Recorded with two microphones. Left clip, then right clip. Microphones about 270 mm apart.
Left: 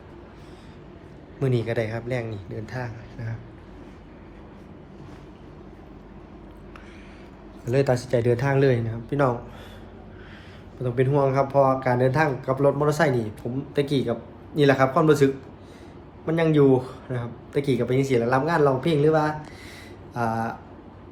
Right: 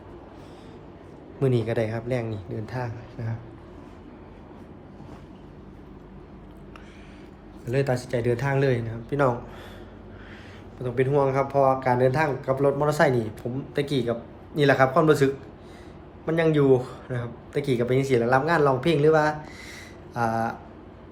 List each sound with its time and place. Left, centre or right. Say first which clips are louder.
1.4 s speech: right 1 dB; centre
7.6 s speech: left 3 dB; centre
10.8 s speech: even; centre